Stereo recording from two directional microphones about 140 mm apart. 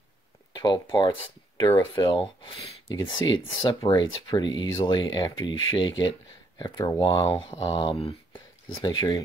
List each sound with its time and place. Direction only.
0.5 s speech: 30° left (ahead or behind)